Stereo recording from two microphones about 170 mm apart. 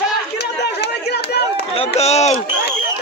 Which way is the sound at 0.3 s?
75° left (ahead or behind).